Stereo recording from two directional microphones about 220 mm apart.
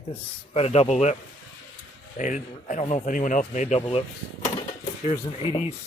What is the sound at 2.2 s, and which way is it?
Speech, 35° left (ahead or behind).